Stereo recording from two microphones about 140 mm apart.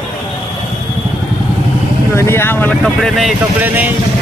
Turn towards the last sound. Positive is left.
turn(degrees=-10)  # may be behind; listen again after turning